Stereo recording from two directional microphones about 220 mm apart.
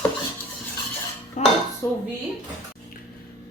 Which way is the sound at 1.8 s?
10° left (ahead or behind).